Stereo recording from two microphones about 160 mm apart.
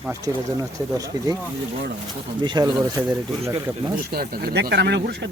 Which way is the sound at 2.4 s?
25° right (ahead or behind).